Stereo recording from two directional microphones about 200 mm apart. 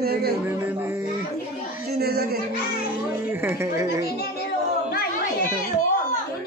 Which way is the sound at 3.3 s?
10° right (ahead or behind).